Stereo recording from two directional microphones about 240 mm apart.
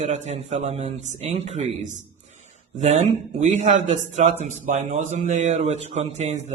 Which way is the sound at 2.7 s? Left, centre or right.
Right.